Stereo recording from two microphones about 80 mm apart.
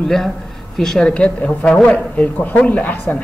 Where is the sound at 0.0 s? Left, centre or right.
Centre.